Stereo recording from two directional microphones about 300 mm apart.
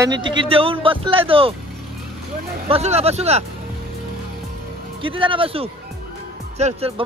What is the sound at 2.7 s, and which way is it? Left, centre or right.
Speech, right.